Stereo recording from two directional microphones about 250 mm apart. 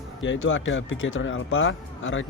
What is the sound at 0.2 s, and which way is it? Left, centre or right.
Speech, left.